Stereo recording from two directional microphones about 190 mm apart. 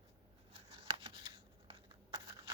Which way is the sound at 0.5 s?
30° right (ahead or behind).